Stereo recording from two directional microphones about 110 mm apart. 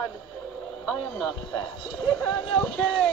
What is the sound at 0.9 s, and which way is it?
Radio, centre (ahead or behind).